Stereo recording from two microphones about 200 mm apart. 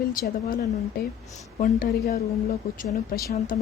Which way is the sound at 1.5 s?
45° left (ahead or behind).